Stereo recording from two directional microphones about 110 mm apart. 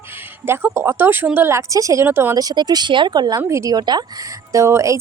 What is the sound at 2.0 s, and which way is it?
Speech, 20° right (ahead or behind).